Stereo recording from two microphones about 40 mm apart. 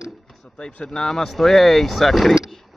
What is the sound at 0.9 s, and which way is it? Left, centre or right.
Speech, left.